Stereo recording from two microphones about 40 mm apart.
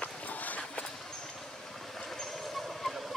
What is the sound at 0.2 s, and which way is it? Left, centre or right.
Run, left.